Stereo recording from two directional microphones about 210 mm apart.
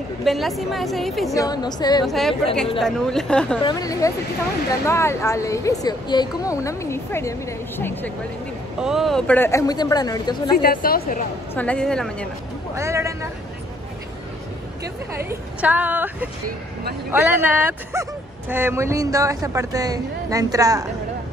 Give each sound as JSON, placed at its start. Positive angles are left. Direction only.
{"t": 0.2, "sound": "a woman's voice", "side_deg": 0}
{"t": 1.3, "sound": "a woman's voice", "side_deg": 15}
{"t": 2.0, "sound": "a woman's voice", "side_deg": 0}
{"t": 3.6, "sound": "speech", "side_deg": 15}
{"t": 8.7, "sound": "speech", "side_deg": 0}
{"t": 10.6, "sound": "a woman's voice", "side_deg": 45}
{"t": 11.5, "sound": "a woman's voice", "side_deg": 5}
{"t": 12.7, "sound": "a woman's voice", "side_deg": -15}
{"t": 15.2, "sound": "a woman's voice", "side_deg": -10}